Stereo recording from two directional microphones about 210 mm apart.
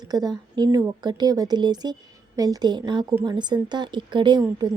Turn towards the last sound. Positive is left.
turn(degrees=-20)  # may be behind; listen again after turning